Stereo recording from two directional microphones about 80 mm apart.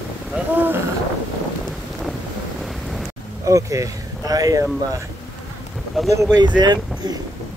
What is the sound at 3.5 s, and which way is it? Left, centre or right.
Speech, right.